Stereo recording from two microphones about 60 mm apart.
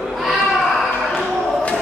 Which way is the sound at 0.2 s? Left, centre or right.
Centre.